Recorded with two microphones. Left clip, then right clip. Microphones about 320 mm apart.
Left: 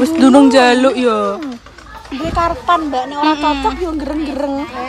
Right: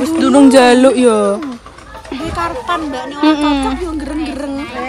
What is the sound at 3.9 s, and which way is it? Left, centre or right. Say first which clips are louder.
Speech: left 1 dB; left.